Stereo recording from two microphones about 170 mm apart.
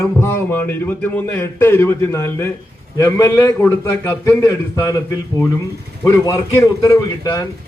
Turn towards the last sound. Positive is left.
turn(degrees=25)  # may be behind; listen again after turning